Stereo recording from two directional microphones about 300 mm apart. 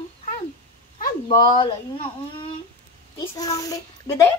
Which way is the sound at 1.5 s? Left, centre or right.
Centre.